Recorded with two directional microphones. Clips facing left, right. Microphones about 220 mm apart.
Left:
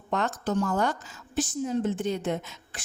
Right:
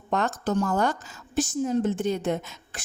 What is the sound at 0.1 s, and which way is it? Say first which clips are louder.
A woman's voice: right 2 dB; 45° right (ahead or behind).